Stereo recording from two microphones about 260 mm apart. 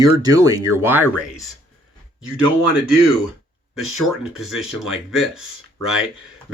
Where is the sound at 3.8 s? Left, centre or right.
Centre.